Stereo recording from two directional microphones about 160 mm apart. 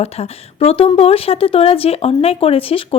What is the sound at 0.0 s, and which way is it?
Speech, 40° left (ahead or behind).